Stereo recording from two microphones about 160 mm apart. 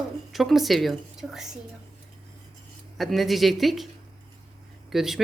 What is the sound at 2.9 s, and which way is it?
Speech, centre (ahead or behind).